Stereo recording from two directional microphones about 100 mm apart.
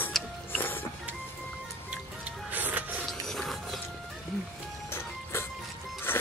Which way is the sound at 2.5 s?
15° right (ahead or behind).